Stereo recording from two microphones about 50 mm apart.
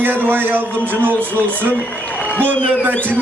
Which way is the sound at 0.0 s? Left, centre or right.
Right.